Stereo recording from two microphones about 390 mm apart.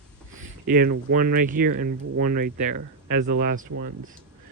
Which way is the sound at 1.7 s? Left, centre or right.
Right.